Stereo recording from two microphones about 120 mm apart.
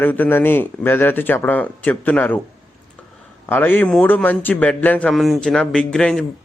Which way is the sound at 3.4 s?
20° left (ahead or behind).